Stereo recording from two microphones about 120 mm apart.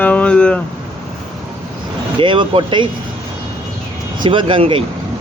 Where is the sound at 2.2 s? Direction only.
45° right (ahead or behind).